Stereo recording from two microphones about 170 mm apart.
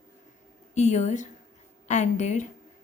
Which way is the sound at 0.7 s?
45° left (ahead or behind).